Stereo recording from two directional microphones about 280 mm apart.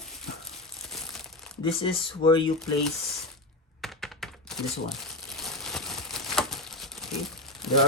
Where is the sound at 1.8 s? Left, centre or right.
Centre.